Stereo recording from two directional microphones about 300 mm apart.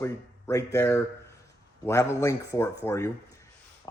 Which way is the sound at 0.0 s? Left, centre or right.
Centre.